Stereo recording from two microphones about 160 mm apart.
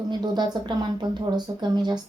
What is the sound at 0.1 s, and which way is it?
Speech, 25° right (ahead or behind).